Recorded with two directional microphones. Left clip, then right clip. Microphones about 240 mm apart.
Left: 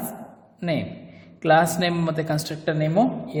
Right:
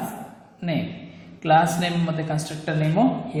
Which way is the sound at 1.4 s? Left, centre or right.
Left.